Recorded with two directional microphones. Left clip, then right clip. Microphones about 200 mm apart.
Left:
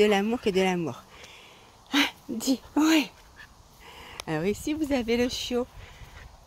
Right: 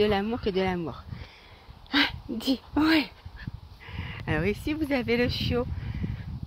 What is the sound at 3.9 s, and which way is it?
Speech, centre (ahead or behind).